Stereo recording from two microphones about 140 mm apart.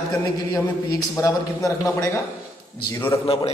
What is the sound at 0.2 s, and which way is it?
A man's voice, 25° left (ahead or behind).